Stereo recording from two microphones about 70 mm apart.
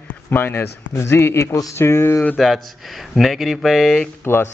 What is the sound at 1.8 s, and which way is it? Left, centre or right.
Speech, left.